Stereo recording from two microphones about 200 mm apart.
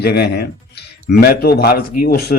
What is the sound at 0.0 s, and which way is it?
Speech, 55° left (ahead or behind).